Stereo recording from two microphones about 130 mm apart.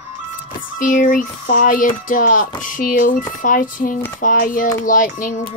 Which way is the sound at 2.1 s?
90° left.